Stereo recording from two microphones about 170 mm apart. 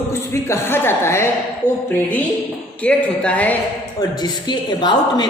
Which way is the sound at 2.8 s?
5° left (ahead or behind).